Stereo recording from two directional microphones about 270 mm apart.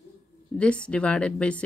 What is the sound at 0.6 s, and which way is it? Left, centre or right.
Speech, centre.